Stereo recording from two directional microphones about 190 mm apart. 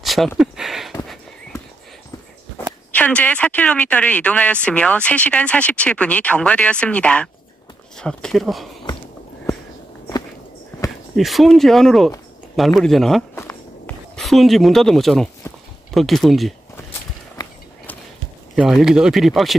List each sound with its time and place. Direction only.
0.0 s a sound: centre (ahead or behind)
2.9 s speech: 5° left (ahead or behind)
11.1 s speech: centre (ahead or behind)
13.3 s walk: 15° left (ahead or behind)
14.2 s speech: centre (ahead or behind)
15.4 s a sound: 15° left (ahead or behind)
15.9 s speech: centre (ahead or behind)
18.6 s speech: 5° right (ahead or behind)